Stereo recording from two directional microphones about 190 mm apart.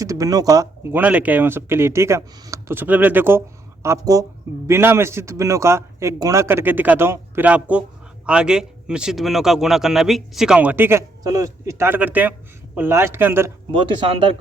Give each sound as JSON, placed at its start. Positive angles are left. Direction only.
{"t": 0.0, "sound": "a man's voice", "side_deg": -15}
{"t": 13.7, "sound": "speech", "side_deg": -25}